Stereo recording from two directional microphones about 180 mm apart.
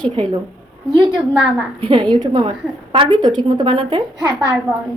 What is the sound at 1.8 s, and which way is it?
A woman's voice, 25° right (ahead or behind).